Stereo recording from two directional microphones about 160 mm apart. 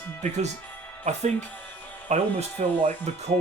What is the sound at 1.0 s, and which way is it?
Speech, 45° right (ahead or behind).